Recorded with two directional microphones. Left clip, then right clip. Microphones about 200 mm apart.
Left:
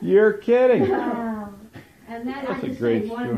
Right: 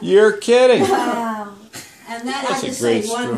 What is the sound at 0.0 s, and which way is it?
Speech, 15° right (ahead or behind).